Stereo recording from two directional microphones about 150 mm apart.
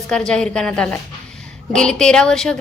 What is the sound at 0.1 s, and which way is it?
A woman's voice, 5° left (ahead or behind).